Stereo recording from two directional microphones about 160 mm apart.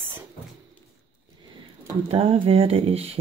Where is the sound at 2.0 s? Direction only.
35° right (ahead or behind).